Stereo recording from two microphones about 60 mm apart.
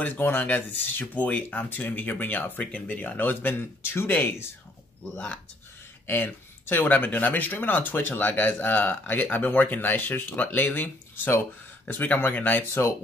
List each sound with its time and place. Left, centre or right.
0.0 s speech: left
6.0 s speech: left